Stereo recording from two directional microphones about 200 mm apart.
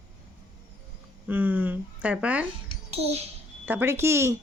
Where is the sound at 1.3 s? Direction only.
10° right (ahead or behind).